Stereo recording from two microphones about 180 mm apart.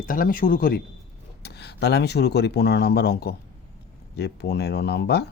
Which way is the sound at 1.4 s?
65° left (ahead or behind).